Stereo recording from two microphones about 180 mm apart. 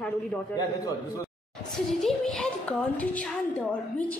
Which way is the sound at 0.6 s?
20° left (ahead or behind).